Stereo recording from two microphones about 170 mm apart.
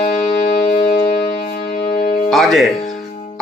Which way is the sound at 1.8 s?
45° left (ahead or behind).